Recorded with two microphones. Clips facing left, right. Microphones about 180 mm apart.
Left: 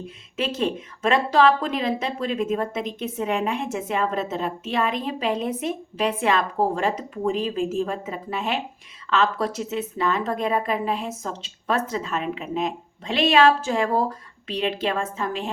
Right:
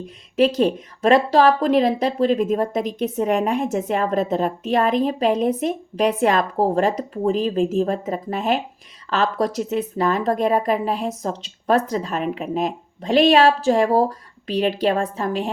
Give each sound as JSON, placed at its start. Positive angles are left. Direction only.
{"t": 0.3, "sound": "speech", "side_deg": -40}